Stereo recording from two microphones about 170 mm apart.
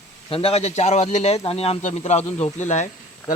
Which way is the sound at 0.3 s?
35° left (ahead or behind).